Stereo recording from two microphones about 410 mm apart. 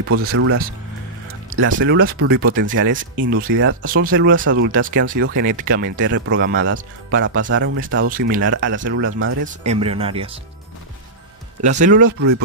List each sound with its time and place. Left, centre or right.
0.0 s speech: right
9.5 s speech: centre
11.6 s speech: centre
12.2 s speech: right